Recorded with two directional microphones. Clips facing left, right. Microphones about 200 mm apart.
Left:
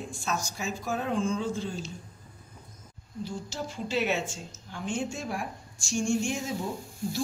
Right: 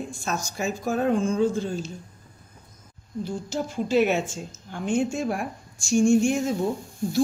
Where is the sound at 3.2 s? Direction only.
50° right (ahead or behind).